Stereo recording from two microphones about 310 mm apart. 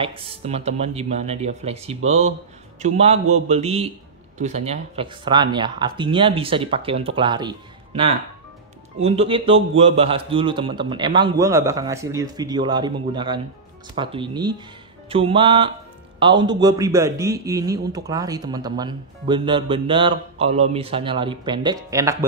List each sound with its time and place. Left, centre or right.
0.0 s a man's voice: centre